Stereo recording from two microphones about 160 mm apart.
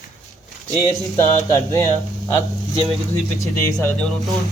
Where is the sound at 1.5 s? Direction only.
20° left (ahead or behind).